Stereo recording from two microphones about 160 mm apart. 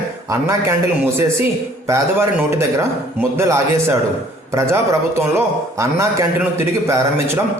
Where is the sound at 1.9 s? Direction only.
20° right (ahead or behind).